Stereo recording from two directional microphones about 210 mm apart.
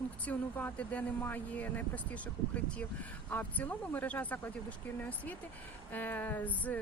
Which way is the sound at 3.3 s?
10° left (ahead or behind).